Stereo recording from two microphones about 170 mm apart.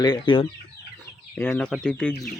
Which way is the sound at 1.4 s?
5° left (ahead or behind).